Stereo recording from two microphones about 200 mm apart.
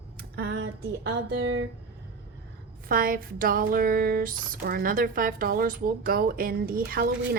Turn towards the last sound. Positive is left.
turn(degrees=-45)  # may be behind; listen again after turning